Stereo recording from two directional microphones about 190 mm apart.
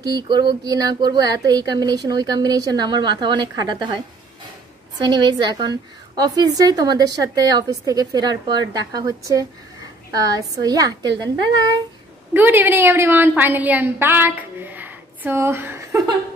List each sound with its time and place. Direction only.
0.0 s a woman's voice: 20° right (ahead or behind)
12.4 s a woman's voice: 10° right (ahead or behind)